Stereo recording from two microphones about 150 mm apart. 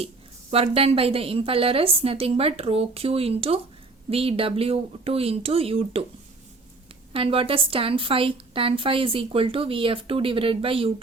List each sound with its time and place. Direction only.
0.5 s a woman's voice: 40° right (ahead or behind)
7.1 s a woman's voice: 40° right (ahead or behind)